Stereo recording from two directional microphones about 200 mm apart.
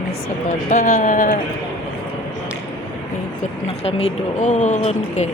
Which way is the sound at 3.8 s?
30° left (ahead or behind).